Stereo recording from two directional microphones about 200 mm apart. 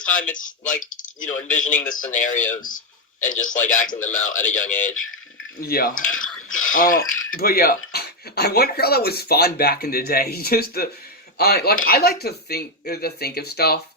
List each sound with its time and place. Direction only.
0.3 s speech: 40° left (ahead or behind)